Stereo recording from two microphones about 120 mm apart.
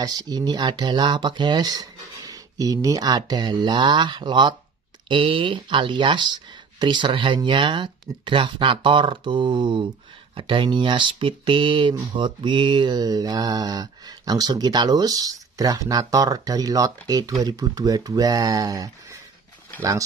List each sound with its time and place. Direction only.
0.0 s speech: 35° right (ahead or behind)